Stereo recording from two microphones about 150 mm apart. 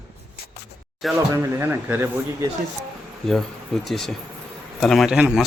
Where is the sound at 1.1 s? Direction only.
15° right (ahead or behind).